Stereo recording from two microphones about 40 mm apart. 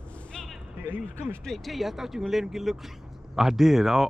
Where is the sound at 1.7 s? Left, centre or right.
Centre.